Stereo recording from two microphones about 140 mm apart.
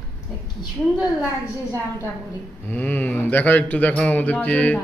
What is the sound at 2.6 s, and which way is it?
Speech, 15° left (ahead or behind).